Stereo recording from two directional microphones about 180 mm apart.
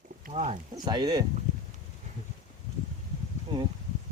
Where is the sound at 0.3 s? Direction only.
45° right (ahead or behind).